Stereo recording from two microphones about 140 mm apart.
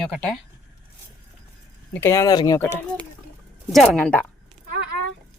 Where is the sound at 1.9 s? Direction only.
20° left (ahead or behind).